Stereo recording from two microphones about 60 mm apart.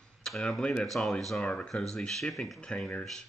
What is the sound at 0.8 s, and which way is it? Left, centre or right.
Speech, centre.